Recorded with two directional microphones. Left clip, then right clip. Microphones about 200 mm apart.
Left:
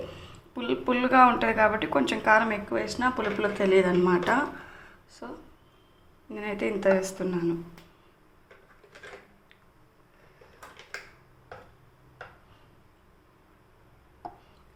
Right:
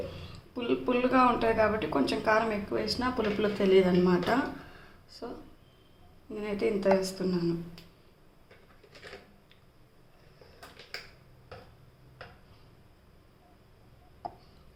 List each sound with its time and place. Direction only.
0.5 s speech: 15° left (ahead or behind)
6.3 s speech: 15° left (ahead or behind)